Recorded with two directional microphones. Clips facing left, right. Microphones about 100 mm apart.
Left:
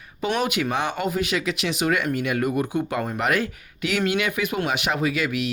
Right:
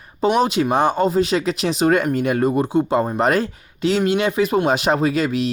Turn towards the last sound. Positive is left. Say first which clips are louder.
# right 5 dB
turn(degrees=-35)  # may be behind; listen again after turning